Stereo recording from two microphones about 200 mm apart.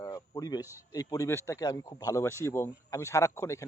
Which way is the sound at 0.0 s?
15° left (ahead or behind).